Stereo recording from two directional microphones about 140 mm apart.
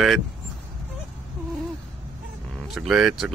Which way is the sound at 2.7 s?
5° right (ahead or behind).